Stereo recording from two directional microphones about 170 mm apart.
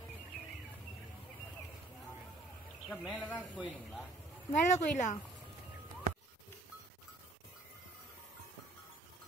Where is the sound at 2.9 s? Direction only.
5° right (ahead or behind).